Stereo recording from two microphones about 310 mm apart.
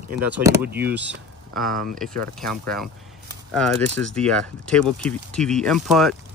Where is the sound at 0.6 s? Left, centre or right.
Right.